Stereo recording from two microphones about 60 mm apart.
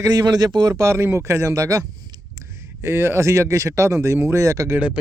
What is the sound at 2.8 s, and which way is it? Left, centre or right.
Speech, right.